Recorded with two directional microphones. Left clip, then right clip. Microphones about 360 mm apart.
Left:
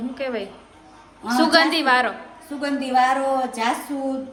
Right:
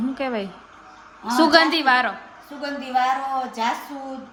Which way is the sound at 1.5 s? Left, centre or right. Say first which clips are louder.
Even; centre.